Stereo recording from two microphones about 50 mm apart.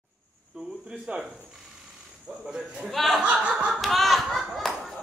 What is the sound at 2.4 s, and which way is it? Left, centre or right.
Speech, centre.